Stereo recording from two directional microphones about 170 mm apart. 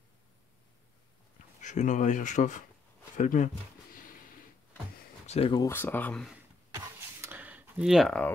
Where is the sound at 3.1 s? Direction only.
50° left (ahead or behind).